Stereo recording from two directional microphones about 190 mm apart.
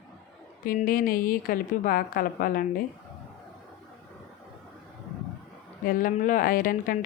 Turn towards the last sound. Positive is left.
turn(degrees=45)  # may be behind; listen again after turning